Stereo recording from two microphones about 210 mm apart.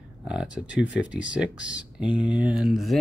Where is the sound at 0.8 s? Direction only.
60° left (ahead or behind).